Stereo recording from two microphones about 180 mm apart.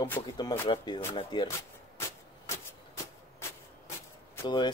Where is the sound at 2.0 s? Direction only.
15° left (ahead or behind).